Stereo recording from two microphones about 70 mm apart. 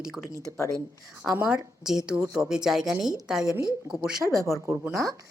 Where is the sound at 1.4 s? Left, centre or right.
Centre.